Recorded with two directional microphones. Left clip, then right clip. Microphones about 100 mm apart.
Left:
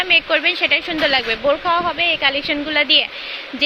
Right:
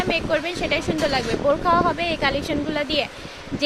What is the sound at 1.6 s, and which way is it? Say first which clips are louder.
Speech: left 2 dB; 50° right (ahead or behind).